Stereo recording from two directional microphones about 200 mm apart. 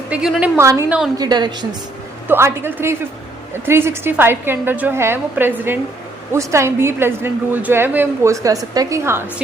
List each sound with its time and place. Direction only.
0.1 s a woman's voice: 5° right (ahead or behind)
1.2 s a woman's voice: 20° right (ahead or behind)